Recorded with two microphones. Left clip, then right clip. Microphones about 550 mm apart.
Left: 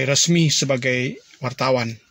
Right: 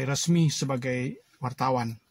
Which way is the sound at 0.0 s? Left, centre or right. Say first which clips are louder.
Left 10 dB; right.